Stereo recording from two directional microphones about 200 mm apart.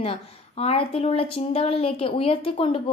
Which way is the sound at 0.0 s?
30° left (ahead or behind).